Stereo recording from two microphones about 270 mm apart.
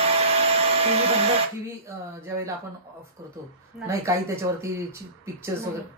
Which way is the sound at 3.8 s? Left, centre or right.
Centre.